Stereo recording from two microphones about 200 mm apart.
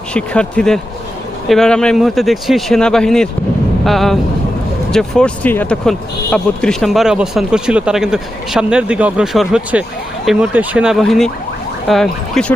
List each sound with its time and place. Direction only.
0.1 s speech: 5° left (ahead or behind)